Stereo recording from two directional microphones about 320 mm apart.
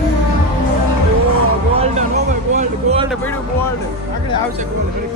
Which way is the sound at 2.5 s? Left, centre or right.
Centre.